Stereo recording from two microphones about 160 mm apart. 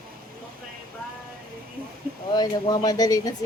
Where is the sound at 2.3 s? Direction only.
25° left (ahead or behind).